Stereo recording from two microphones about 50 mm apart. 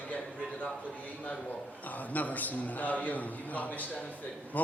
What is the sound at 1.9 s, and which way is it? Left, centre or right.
Speech, left.